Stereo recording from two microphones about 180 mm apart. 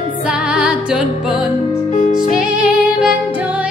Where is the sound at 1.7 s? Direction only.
40° left (ahead or behind).